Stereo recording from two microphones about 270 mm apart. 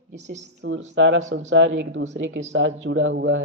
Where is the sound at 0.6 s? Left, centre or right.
Right.